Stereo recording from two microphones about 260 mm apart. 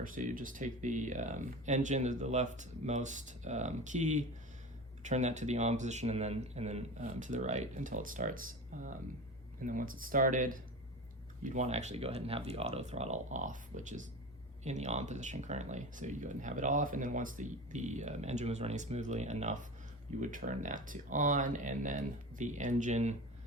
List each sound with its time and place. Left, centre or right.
0.0 s speech: right